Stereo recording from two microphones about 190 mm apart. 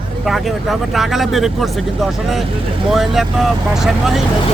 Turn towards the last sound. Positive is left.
turn(degrees=0)  # may be behind; listen again after turning